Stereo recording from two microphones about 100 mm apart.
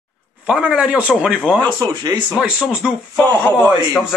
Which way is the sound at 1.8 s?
40° right (ahead or behind).